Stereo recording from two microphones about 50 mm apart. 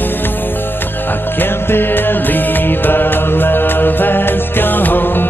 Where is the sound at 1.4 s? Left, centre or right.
Left.